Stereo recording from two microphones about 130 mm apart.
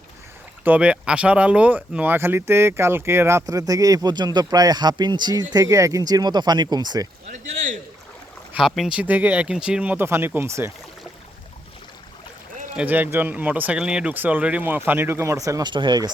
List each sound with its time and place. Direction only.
0.6 s speech: 10° right (ahead or behind); by 7.1 s 30° right (ahead or behind)
8.5 s speech: centre (ahead or behind); by 10.8 s 20° right (ahead or behind)
12.7 s speech: 15° right (ahead or behind)
15.7 s speech: 35° right (ahead or behind)